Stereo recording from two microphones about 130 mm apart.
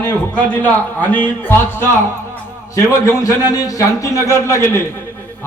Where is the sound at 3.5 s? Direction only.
25° left (ahead or behind).